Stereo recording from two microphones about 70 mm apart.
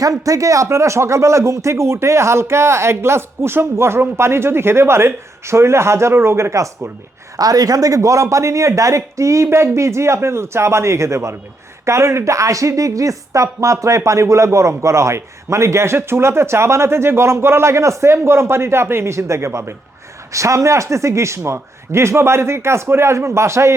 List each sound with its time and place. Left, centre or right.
0.3 s speech: right
7.3 s a woman's voice: right